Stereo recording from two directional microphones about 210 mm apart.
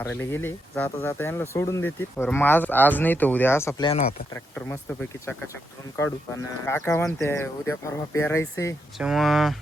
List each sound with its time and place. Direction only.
0.0 s speech: 10° left (ahead or behind)
6.0 s speech: 10° left (ahead or behind)
9.0 s speech: centre (ahead or behind)